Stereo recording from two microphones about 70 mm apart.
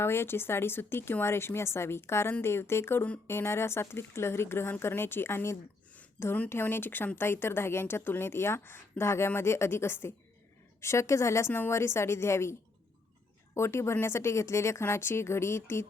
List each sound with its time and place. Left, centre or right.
0.0 s a woman's voice: left